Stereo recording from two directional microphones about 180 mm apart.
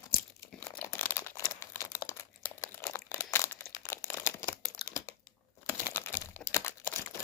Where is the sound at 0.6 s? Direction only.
10° left (ahead or behind).